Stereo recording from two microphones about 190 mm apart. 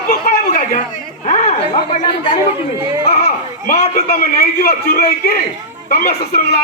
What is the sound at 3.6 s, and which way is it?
Speech, 40° left (ahead or behind).